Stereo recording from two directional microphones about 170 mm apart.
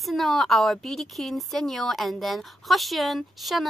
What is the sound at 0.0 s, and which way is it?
A woman's voice, centre (ahead or behind).